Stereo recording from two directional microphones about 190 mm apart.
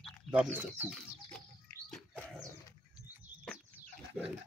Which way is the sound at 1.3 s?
5° left (ahead or behind).